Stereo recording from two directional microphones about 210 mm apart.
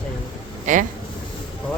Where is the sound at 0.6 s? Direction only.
35° right (ahead or behind).